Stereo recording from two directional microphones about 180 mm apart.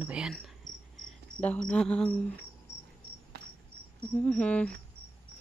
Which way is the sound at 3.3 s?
60° right (ahead or behind).